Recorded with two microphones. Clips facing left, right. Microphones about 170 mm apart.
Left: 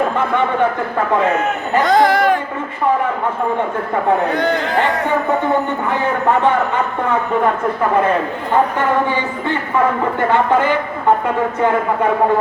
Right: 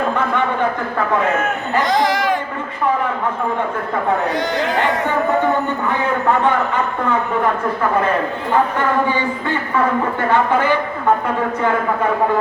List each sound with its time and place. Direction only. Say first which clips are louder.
1.8 s speech: left 5 dB; 55° left (ahead or behind)
4.3 s speech: left 3 dB; 55° left (ahead or behind)